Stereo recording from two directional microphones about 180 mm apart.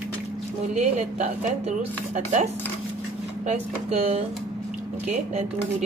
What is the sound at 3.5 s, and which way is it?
Speech, 35° right (ahead or behind).